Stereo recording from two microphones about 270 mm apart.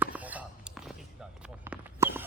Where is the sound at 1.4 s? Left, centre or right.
Centre.